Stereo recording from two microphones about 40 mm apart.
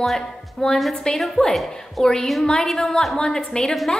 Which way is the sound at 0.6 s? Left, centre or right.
Centre.